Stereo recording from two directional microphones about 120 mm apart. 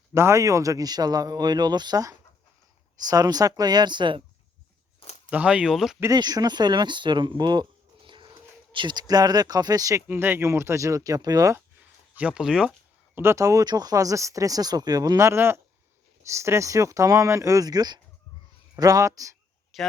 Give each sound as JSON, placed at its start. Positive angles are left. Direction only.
{"t": 0.1, "sound": "a man's voice", "side_deg": -20}
{"t": 5.3, "sound": "speech", "side_deg": -10}
{"t": 6.1, "sound": "speech", "side_deg": -35}
{"t": 10.1, "sound": "speech", "side_deg": -20}
{"t": 11.5, "sound": "a sound", "side_deg": -15}
{"t": 13.1, "sound": "speech", "side_deg": -25}
{"t": 19.7, "sound": "speech", "side_deg": 0}